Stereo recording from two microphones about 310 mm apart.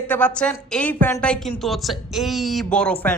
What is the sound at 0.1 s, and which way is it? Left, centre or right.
Speech, centre.